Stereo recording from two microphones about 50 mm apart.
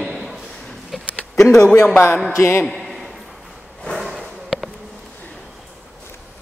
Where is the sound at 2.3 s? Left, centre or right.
Left.